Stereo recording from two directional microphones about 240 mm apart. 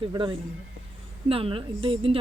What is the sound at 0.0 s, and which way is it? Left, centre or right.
Speech, centre.